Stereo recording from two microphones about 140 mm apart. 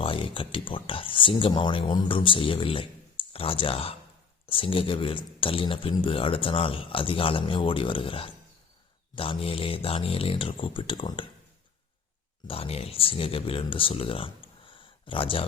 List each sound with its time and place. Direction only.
0.0 s speech: 40° left (ahead or behind)
12.5 s speech: 45° left (ahead or behind)